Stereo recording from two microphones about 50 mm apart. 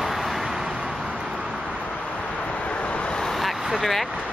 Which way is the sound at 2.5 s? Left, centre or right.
Left.